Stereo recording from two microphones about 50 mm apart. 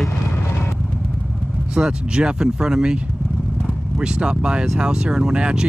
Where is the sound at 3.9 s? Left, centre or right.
Centre.